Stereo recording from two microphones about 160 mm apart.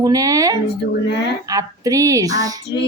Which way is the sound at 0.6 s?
90° left.